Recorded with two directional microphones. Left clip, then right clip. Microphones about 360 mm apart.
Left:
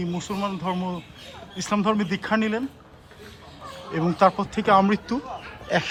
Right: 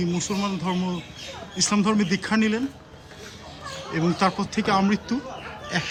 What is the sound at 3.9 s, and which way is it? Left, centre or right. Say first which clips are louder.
Speech: left 4 dB; centre.